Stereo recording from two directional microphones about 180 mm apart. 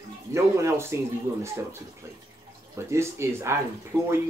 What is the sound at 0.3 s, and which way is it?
Speech, 15° right (ahead or behind).